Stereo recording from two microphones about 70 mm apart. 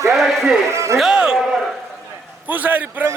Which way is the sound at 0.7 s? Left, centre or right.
Right.